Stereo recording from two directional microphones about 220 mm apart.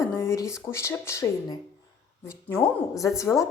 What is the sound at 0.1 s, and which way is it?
A woman's voice, 15° left (ahead or behind).